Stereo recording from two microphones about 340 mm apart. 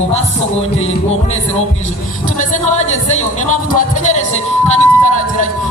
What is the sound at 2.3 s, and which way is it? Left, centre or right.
Speech, centre.